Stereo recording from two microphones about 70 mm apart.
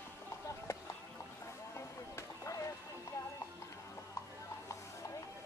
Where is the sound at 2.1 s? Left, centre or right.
Left.